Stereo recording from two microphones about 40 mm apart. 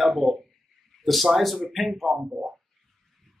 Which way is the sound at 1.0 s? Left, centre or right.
Centre.